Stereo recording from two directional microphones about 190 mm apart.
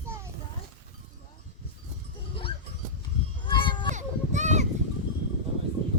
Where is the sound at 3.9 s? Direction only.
40° right (ahead or behind).